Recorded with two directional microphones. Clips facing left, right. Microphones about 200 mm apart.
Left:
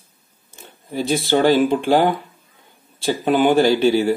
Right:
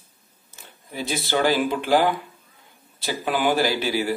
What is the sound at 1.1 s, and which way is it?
A man's voice, 30° left (ahead or behind).